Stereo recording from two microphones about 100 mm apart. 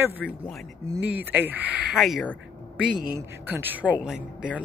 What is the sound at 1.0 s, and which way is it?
Speech, 15° right (ahead or behind).